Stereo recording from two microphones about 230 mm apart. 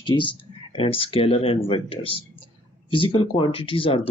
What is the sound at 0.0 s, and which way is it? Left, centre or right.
Speech, left.